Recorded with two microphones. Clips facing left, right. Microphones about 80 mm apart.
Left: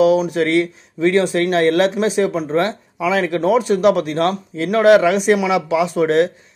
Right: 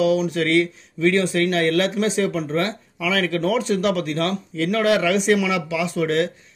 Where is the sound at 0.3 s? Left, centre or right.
Left.